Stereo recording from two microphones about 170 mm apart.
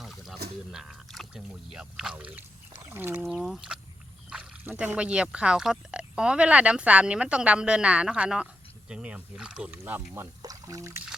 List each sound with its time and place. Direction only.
0.0 s a sound: centre (ahead or behind)
0.7 s speech: 5° right (ahead or behind)
10.4 s speech: 20° right (ahead or behind)